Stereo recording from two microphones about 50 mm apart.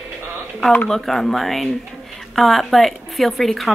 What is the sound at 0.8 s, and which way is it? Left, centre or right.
Speech, centre.